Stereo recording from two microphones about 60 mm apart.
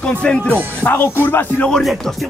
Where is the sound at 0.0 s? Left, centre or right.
Centre.